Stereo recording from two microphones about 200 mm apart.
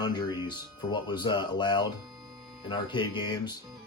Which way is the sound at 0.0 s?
20° left (ahead or behind).